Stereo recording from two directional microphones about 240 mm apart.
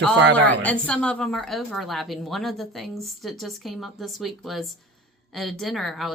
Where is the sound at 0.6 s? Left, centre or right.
Centre.